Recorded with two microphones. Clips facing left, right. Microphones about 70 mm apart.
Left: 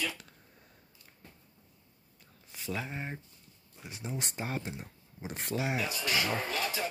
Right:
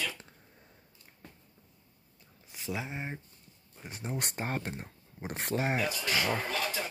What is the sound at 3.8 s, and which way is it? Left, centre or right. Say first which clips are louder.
Speech: right 2 dB; right.